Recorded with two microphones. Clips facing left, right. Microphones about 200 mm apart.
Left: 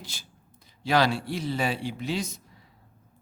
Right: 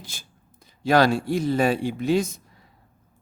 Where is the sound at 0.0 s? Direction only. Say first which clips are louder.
Even; 50° right (ahead or behind).